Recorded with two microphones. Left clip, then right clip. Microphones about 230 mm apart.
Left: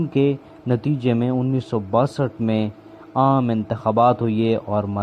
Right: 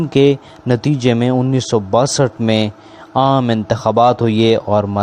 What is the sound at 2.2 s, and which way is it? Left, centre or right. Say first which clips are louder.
Speech: right 8 dB; right.